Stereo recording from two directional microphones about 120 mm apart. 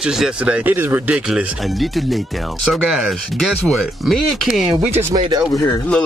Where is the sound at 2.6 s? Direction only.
Centre (ahead or behind).